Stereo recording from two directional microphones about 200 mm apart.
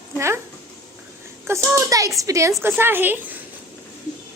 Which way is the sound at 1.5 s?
15° right (ahead or behind).